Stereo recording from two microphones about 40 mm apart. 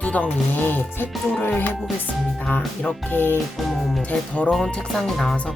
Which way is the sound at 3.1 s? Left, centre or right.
Left.